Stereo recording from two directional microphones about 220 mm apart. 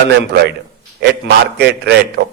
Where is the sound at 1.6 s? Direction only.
50° right (ahead or behind).